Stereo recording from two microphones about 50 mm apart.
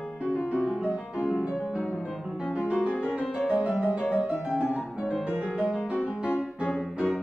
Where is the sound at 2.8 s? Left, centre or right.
Centre.